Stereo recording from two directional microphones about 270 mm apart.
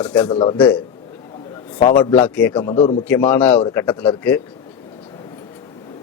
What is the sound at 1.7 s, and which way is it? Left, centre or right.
Speech, centre.